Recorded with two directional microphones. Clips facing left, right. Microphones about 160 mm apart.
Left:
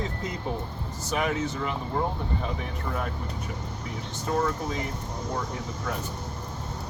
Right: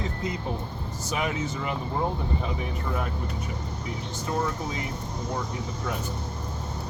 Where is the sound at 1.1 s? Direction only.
5° right (ahead or behind).